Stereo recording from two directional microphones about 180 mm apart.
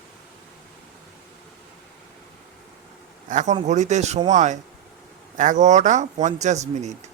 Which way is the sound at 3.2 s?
45° right (ahead or behind).